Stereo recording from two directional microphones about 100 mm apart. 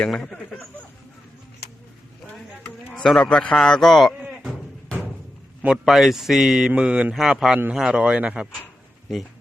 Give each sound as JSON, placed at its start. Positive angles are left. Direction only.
{"t": 0.0, "sound": "speech", "side_deg": 5}
{"t": 2.9, "sound": "a man's voice", "side_deg": 5}
{"t": 4.2, "sound": "sheep", "side_deg": -10}
{"t": 5.6, "sound": "a man's voice", "side_deg": 0}